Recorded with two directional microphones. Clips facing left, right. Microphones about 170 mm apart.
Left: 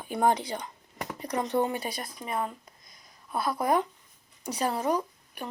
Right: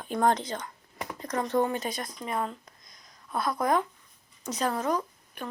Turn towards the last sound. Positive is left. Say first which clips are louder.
# left 1 dB
turn(degrees=10)  # may be behind; listen again after turning